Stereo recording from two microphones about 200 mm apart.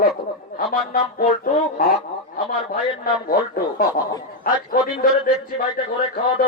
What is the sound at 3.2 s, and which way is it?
Speech, 45° left (ahead or behind).